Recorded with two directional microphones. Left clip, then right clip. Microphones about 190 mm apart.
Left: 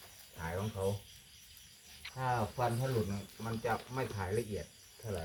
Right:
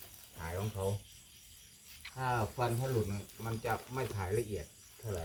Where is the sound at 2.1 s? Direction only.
25° right (ahead or behind).